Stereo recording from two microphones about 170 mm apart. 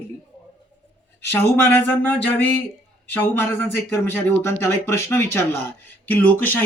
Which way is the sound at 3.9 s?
10° left (ahead or behind).